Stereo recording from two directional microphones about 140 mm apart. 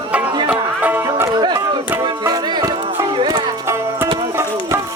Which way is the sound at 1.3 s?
30° right (ahead or behind).